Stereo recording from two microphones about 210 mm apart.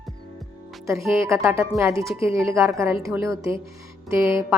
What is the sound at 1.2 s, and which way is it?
A woman's voice, 15° right (ahead or behind).